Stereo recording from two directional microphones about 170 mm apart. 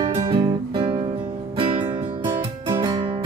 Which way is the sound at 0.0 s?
30° right (ahead or behind).